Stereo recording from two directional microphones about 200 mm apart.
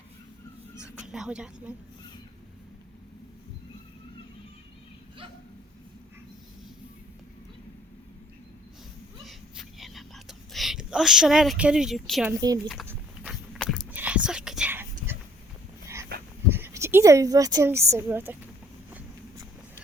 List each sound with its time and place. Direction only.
0.8 s speech: 5° right (ahead or behind)
9.2 s whispering: centre (ahead or behind)
12.6 s speech: 5° left (ahead or behind)
12.9 s whispering: 5° right (ahead or behind)
16.1 s dog: 50° right (ahead or behind)
16.5 s speech: 10° right (ahead or behind)
18.9 s vehicle: 15° right (ahead or behind)